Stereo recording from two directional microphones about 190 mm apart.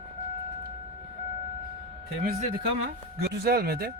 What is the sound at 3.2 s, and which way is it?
Speech, 55° right (ahead or behind).